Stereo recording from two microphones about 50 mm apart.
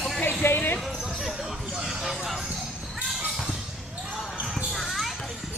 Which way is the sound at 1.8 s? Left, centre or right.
Centre.